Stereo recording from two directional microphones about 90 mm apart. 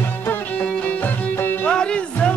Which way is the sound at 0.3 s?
15° left (ahead or behind).